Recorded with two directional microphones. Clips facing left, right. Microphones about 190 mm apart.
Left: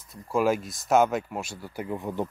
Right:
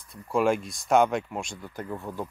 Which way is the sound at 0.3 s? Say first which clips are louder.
Even; 5° left (ahead or behind).